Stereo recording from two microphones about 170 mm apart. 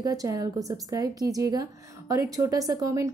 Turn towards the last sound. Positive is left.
turn(degrees=-20)  # may be behind; listen again after turning